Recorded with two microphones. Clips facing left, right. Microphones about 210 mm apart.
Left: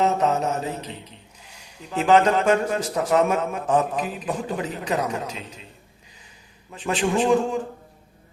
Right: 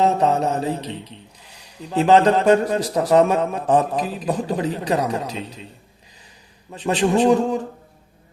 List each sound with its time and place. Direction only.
0.0 s a man's voice: 35° right (ahead or behind)
6.7 s a man's voice: 35° right (ahead or behind)